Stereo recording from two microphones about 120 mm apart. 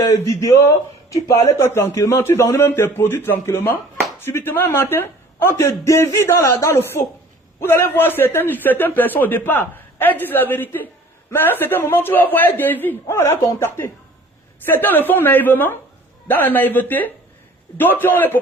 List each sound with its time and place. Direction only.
0.0 s a man's voice: 25° left (ahead or behind)